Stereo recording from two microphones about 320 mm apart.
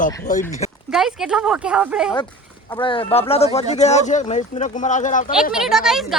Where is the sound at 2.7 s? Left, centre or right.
Centre.